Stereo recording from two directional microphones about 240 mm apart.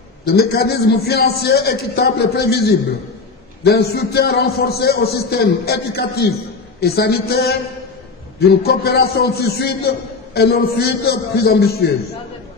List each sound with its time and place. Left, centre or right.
0.3 s a man's voice: left